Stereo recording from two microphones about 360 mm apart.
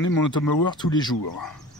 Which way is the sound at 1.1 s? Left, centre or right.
Left.